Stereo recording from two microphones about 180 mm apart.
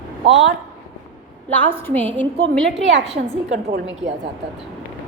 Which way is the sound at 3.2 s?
60° right (ahead or behind).